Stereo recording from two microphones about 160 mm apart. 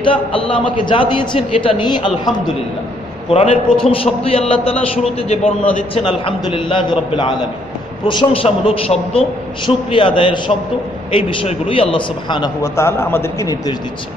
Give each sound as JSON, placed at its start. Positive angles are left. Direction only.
{"t": 0.0, "sound": "a man's voice", "side_deg": 35}
{"t": 3.3, "sound": "a man's voice", "side_deg": 40}
{"t": 6.0, "sound": "a man's voice", "side_deg": 30}
{"t": 12.7, "sound": "a man's voice", "side_deg": 15}